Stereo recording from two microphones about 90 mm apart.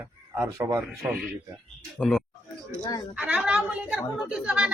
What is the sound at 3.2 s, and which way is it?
A woman's voice, 15° right (ahead or behind).